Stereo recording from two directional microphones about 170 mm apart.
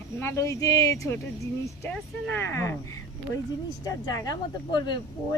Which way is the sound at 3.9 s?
20° left (ahead or behind).